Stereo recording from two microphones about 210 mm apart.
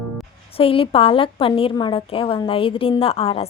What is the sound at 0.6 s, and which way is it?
A woman's voice, 25° left (ahead or behind).